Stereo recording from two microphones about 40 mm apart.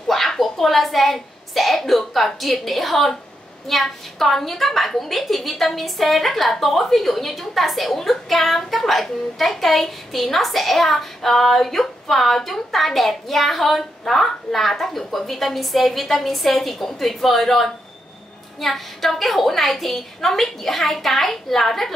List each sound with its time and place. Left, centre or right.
0.1 s a woman's voice: centre